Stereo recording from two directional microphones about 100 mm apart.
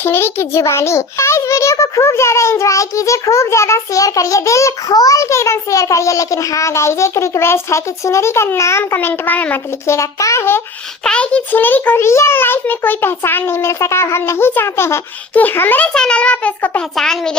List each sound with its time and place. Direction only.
0.0 s a child's voice: 25° left (ahead or behind)
9.9 s a child's voice: 30° left (ahead or behind)
11.0 s a child's voice: 10° left (ahead or behind)
17.0 s a child's voice: 5° left (ahead or behind)